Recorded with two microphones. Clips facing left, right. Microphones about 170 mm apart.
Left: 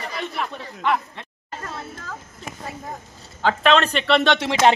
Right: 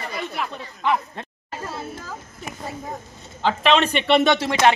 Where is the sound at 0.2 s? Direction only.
5° right (ahead or behind).